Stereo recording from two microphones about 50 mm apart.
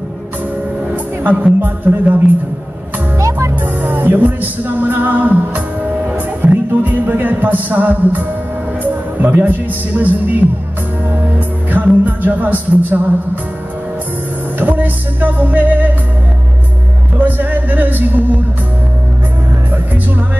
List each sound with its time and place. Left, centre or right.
1.6 s music: right
3.2 s music: right
3.8 s music: right
6.0 s speech: right
9.2 s music: right
11.1 s speech: right
14.6 s music: right
17.2 s music: right